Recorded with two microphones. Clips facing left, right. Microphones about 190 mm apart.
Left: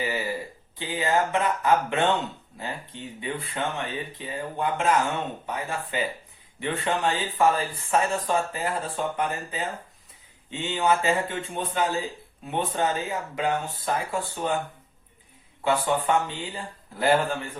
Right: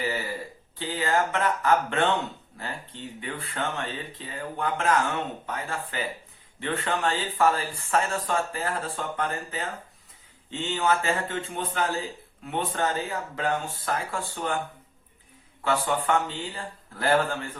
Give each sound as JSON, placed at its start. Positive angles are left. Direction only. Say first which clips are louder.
{"t": 0.0, "sound": "a sound", "louder": "left 1 dB", "side_deg": 15}
{"t": 0.8, "sound": "speech", "louder": "left 1 dB", "side_deg": 15}
{"t": 15.6, "sound": "speech", "louder": "left 2 dB", "side_deg": 15}